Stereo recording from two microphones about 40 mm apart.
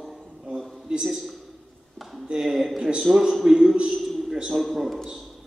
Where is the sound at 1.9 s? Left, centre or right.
Centre.